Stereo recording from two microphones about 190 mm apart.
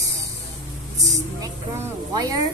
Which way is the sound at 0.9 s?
20° right (ahead or behind).